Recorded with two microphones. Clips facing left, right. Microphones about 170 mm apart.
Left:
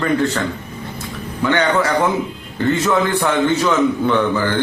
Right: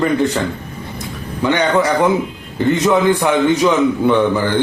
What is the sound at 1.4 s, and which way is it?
A man's voice, 15° right (ahead or behind).